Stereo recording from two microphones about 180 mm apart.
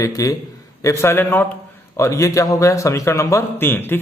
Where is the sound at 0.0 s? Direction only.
20° left (ahead or behind).